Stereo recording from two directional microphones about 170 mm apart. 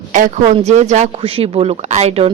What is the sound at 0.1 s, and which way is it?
Speech, 45° right (ahead or behind).